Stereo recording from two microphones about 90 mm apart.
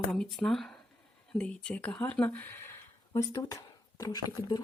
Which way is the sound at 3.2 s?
40° left (ahead or behind).